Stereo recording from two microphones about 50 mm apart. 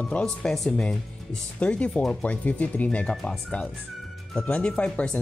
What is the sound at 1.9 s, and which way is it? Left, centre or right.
Speech, centre.